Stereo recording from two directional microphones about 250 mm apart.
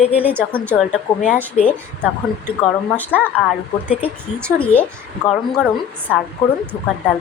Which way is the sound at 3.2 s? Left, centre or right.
Centre.